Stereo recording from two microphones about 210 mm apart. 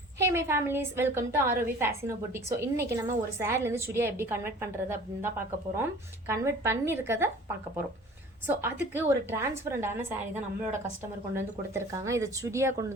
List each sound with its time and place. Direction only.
0.2 s a woman's voice: 10° right (ahead or behind)
8.4 s a woman's voice: 10° right (ahead or behind)
11.3 s a woman's voice: 15° right (ahead or behind)